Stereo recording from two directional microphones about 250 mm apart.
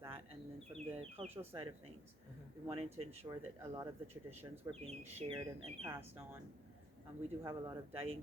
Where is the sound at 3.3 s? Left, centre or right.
Centre.